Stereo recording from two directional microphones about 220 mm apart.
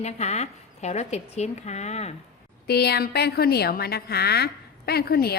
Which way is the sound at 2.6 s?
45° left (ahead or behind).